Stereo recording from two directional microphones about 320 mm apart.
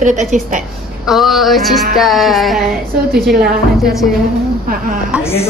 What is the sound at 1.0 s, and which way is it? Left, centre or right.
Music, centre.